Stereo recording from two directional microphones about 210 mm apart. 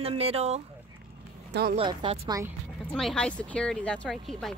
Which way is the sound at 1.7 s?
25° right (ahead or behind).